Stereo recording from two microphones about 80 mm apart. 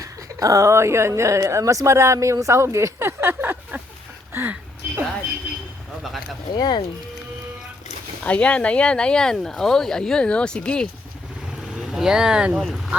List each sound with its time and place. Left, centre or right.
0.0 s a woman's voice: right
4.3 s a sound: right
6.5 s speech: left
8.2 s speech: centre
11.8 s speech: centre